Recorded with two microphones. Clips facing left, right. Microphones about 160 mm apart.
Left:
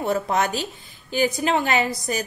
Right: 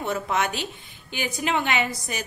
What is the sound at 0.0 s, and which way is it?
A woman's voice, 35° left (ahead or behind).